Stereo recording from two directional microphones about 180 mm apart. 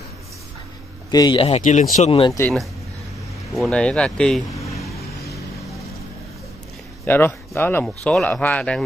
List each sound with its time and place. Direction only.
1.1 s a man's voice: 25° left (ahead or behind)
1.6 s speech: 45° left (ahead or behind)
2.0 s speech: 35° left (ahead or behind)
3.5 s speech: centre (ahead or behind)
4.5 s a sound: 15° left (ahead or behind)
4.7 s vehicle: centre (ahead or behind)
7.1 s speech: 10° left (ahead or behind)